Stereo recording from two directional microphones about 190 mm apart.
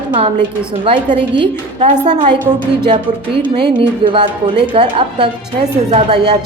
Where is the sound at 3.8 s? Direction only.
25° right (ahead or behind).